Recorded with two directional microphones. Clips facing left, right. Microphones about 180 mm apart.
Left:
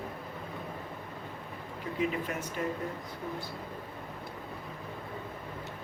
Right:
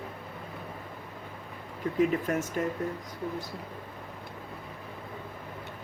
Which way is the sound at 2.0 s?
45° right (ahead or behind).